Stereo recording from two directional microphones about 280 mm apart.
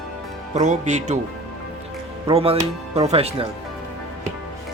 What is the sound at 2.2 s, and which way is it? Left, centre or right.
Speech, right.